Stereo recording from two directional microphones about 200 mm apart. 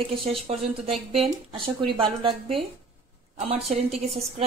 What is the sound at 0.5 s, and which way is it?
A woman's voice, 30° right (ahead or behind).